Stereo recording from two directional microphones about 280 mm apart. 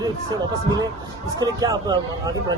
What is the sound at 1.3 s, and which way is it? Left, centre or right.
Speech, centre.